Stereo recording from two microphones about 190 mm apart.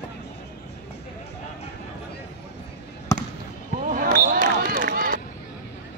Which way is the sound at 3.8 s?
45° right (ahead or behind).